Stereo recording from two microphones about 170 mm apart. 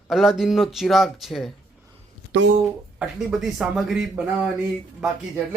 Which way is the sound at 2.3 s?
90° right.